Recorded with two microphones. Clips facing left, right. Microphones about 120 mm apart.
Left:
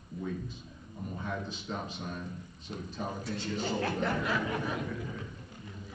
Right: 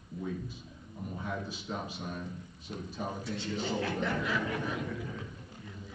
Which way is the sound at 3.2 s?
40° left (ahead or behind).